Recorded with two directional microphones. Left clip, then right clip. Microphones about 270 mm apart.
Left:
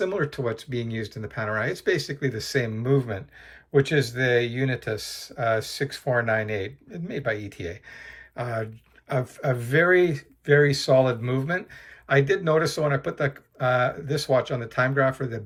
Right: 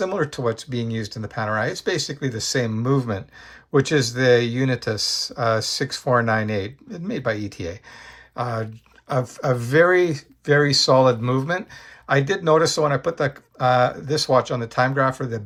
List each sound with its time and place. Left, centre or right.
0.0 s speech: centre